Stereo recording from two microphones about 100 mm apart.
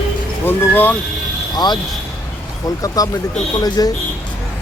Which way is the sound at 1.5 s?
45° left (ahead or behind).